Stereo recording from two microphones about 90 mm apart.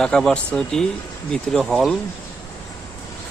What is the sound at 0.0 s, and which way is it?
Speech, 5° left (ahead or behind).